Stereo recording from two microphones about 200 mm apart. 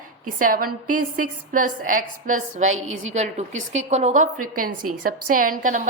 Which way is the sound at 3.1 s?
35° right (ahead or behind).